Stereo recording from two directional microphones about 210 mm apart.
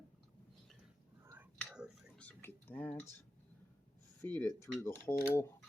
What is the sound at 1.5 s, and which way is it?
Cutlery, 5° right (ahead or behind).